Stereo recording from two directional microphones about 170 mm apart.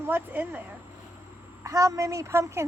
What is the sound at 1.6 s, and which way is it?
A woman's voice, 20° right (ahead or behind).